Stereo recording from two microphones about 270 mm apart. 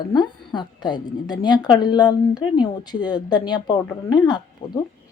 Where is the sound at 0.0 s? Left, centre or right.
Centre.